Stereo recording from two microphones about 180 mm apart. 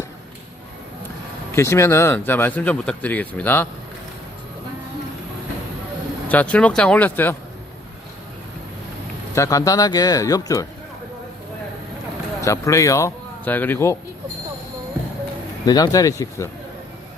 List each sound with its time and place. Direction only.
1.5 s speech: 15° left (ahead or behind)
6.2 s speech: 10° left (ahead or behind)
9.3 s speech: 15° left (ahead or behind)
12.4 s speech: 15° left (ahead or behind)
15.6 s speech: 20° left (ahead or behind)